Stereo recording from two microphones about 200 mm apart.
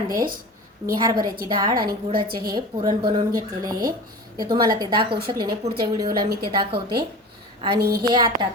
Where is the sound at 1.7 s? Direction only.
45° right (ahead or behind).